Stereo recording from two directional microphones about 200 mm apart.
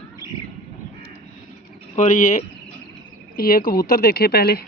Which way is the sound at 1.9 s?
35° left (ahead or behind).